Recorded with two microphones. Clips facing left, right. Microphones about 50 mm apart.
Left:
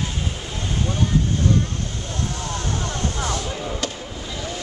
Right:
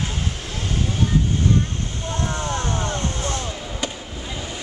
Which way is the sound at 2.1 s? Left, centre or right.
Right.